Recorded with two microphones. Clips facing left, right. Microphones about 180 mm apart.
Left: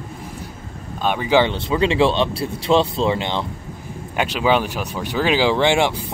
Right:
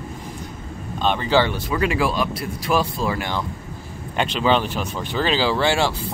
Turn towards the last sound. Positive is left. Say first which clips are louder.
# left 3 dB
turn(degrees=20)  # may be behind; listen again after turning